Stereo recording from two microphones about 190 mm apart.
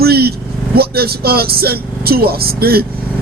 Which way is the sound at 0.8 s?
55° right (ahead or behind).